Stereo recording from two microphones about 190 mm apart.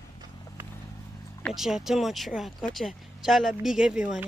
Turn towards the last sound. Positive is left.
turn(degrees=-5)  # may be behind; listen again after turning